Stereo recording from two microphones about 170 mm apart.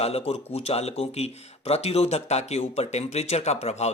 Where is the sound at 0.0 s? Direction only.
40° left (ahead or behind).